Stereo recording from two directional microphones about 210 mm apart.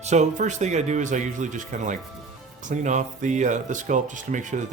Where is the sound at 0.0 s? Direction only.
35° right (ahead or behind).